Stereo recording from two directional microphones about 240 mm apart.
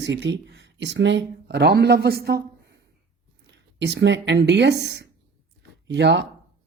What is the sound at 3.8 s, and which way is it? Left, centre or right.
A woman's voice, right.